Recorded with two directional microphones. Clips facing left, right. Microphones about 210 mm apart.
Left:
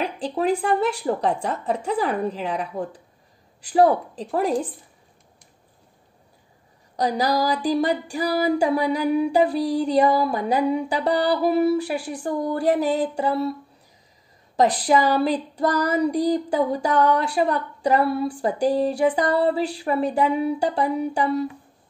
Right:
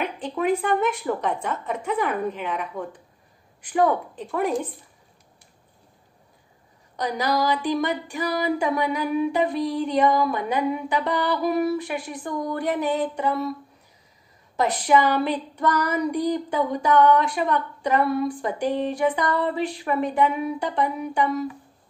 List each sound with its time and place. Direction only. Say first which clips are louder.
0.0 s child singing: left 2 dB; 35° left (ahead or behind)
7.0 s child singing: left 2 dB; 35° left (ahead or behind)
14.6 s child singing: left 2 dB; 35° left (ahead or behind)